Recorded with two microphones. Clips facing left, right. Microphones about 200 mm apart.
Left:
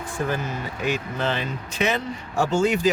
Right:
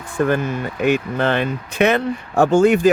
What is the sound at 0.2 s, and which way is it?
Speech, 60° right (ahead or behind).